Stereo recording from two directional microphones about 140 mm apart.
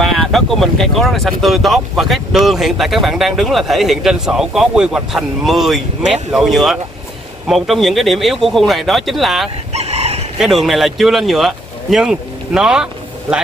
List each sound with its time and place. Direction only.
0.0 s speech: centre (ahead or behind)
9.7 s chicken: 50° right (ahead or behind)
10.4 s speech: centre (ahead or behind)